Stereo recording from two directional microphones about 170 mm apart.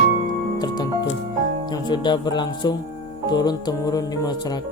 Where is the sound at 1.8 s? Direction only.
25° left (ahead or behind).